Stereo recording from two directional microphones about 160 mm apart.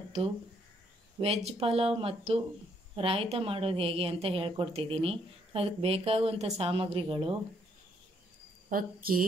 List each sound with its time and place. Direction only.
1.2 s a woman's voice: 40° right (ahead or behind)
8.6 s speech: 60° right (ahead or behind)